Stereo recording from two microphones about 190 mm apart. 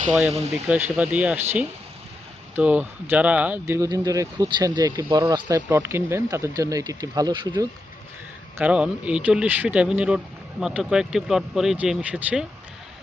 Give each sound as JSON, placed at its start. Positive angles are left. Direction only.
{"t": 0.1, "sound": "speech", "side_deg": -5}
{"t": 2.6, "sound": "speech", "side_deg": -10}
{"t": 8.5, "sound": "speech", "side_deg": -5}